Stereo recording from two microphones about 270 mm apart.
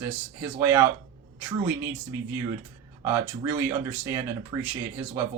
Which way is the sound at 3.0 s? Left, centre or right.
Centre.